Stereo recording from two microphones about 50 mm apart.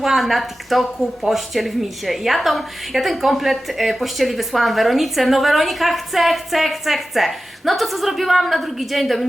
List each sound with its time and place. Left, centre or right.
0.0 s a woman's voice: centre